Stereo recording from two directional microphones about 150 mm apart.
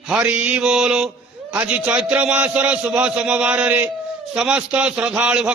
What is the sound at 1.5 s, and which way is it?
A man's voice, 10° right (ahead or behind).